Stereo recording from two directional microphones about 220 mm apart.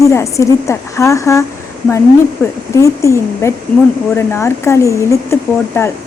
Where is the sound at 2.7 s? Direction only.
15° left (ahead or behind).